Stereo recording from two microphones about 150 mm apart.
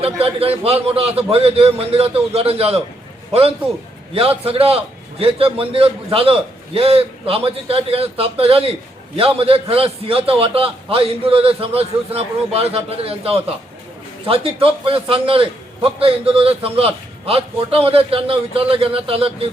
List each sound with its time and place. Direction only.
0.0 s a man's voice: 40° right (ahead or behind)
4.1 s a man's voice: 40° right (ahead or behind)